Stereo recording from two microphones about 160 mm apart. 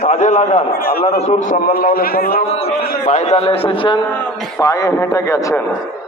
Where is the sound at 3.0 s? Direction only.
45° left (ahead or behind).